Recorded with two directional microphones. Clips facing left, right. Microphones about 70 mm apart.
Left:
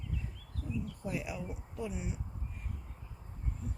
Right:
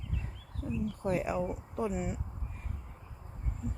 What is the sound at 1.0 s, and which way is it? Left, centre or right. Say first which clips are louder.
Speech: right 11 dB; right.